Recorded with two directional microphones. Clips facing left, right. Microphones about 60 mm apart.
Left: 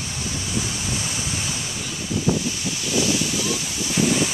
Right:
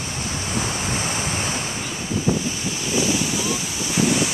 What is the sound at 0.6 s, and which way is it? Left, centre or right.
Waves, right.